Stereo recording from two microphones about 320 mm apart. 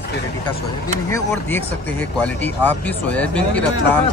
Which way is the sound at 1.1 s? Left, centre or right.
Centre.